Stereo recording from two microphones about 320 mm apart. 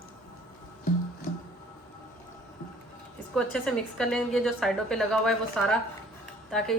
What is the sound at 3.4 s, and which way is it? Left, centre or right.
A woman's voice, centre.